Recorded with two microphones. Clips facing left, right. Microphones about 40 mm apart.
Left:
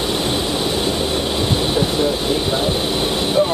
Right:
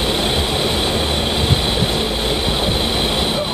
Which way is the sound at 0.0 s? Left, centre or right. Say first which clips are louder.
Right 1 dB; right.